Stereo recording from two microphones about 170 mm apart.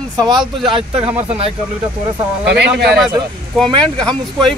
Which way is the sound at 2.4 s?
80° right.